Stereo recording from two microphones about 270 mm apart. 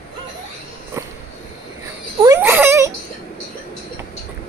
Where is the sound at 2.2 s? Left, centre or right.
Centre.